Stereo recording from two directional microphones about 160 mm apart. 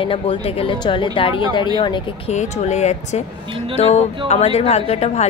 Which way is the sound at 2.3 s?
45° left (ahead or behind).